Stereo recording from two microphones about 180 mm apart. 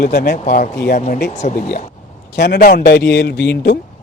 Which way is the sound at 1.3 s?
40° left (ahead or behind).